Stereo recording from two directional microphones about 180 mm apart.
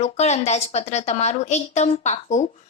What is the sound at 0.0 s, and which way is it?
A woman's voice, 35° left (ahead or behind).